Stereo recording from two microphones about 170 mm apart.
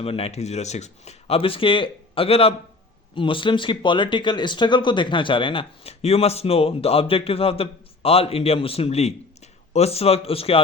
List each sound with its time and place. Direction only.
0.0 s speech: 35° left (ahead or behind)